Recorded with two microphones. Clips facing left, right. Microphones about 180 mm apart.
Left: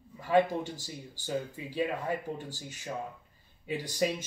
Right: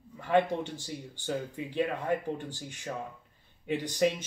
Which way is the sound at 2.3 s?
10° left (ahead or behind).